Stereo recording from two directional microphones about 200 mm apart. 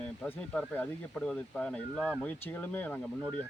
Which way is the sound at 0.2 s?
5° left (ahead or behind).